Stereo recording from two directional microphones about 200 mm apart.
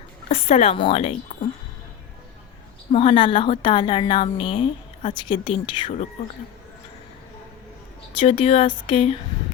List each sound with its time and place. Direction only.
0.3 s a woman's voice: 30° left (ahead or behind)
2.9 s a woman's voice: 30° left (ahead or behind)
8.2 s a woman's voice: 25° left (ahead or behind)